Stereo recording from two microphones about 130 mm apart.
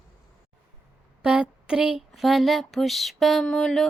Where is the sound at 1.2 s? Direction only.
10° right (ahead or behind).